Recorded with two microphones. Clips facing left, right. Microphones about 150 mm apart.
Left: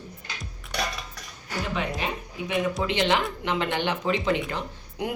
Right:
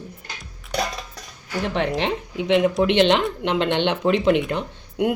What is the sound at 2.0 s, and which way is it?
Speech, 90° right.